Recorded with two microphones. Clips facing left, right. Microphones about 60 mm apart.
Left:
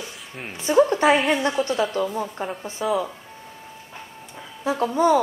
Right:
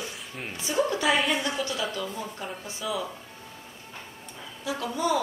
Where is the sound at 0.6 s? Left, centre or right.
Left.